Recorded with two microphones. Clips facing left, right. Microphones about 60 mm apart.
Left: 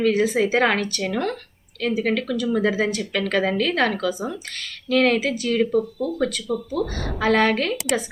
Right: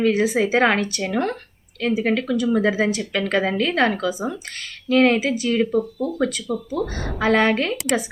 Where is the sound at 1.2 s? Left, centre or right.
Right.